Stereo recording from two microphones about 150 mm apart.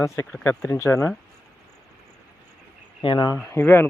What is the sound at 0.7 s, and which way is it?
Speech, 20° left (ahead or behind).